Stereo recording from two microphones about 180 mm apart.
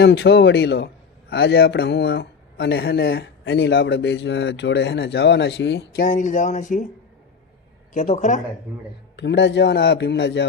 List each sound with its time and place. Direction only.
0.0 s speech: 70° left (ahead or behind); by 6.8 s 45° left (ahead or behind)
7.9 s speech: 40° left (ahead or behind)
8.7 s speech: 5° right (ahead or behind)
9.1 s speech: 75° left (ahead or behind)